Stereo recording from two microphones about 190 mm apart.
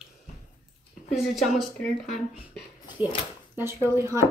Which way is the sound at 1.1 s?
Centre (ahead or behind).